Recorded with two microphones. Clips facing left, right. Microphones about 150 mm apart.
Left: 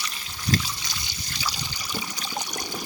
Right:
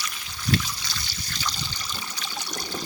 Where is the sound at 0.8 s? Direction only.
15° left (ahead or behind).